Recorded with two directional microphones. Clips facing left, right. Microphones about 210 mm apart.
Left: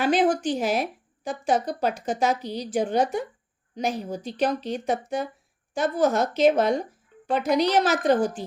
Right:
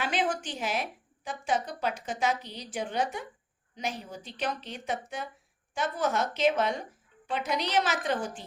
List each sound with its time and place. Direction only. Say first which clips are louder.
0.0 s a woman's voice: left 9 dB; 40° left (ahead or behind)